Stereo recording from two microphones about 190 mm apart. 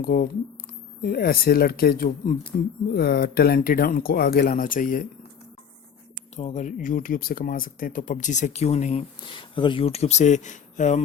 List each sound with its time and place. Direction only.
0.0 s speech: 55° left (ahead or behind)
6.3 s speech: 40° left (ahead or behind)